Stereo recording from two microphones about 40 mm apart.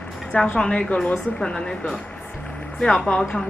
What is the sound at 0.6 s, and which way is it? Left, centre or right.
Speech, left.